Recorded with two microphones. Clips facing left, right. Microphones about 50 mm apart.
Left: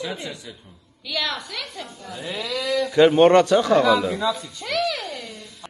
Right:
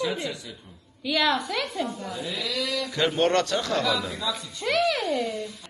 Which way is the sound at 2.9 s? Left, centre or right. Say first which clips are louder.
Left 9 dB; left.